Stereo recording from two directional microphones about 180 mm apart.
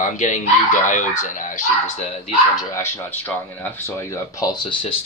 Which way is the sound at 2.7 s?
15° left (ahead or behind).